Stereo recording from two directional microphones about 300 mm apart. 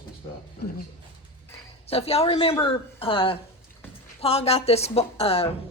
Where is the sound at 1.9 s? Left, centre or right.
Centre.